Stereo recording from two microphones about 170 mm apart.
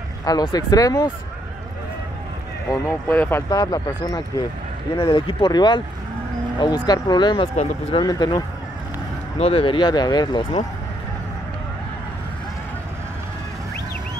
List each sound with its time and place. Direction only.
0.2 s speech: 25° left (ahead or behind)
2.7 s speech: 15° left (ahead or behind)
9.4 s speech: 35° left (ahead or behind)